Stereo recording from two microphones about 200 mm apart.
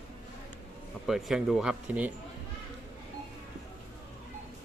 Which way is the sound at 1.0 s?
Centre (ahead or behind).